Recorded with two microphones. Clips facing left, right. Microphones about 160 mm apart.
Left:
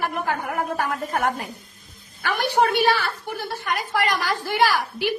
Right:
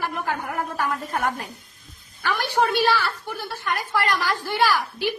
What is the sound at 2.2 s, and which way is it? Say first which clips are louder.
A woman's voice: left 2 dB; 15° left (ahead or behind).